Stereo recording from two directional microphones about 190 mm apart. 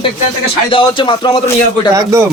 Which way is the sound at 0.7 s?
25° left (ahead or behind).